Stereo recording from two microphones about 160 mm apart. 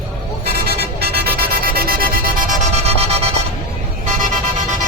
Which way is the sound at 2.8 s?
40° right (ahead or behind).